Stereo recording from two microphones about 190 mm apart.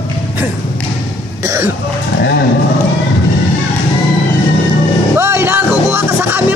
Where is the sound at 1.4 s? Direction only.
15° right (ahead or behind).